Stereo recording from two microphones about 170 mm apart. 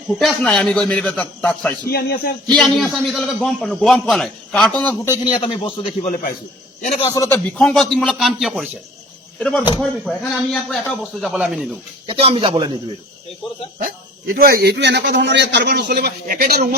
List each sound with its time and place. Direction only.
0.1 s a man's voice: centre (ahead or behind)
1.9 s speech: 65° left (ahead or behind)
2.5 s a man's voice: 5° left (ahead or behind)
5.4 s a man's voice: 30° left (ahead or behind)
7.1 s a man's voice: 15° left (ahead or behind)
7.5 s a man's voice: 5° left (ahead or behind)
12.0 s speech: 35° right (ahead or behind)
14.3 s a man's voice: 60° right (ahead or behind)